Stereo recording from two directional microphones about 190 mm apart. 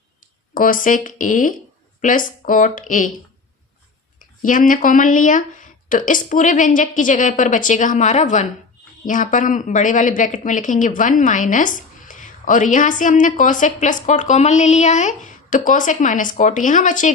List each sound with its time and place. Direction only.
0.5 s a woman's voice: 45° left (ahead or behind)
4.2 s a woman's voice: 45° left (ahead or behind)